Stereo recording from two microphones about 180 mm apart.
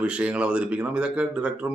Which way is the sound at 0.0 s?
5° right (ahead or behind).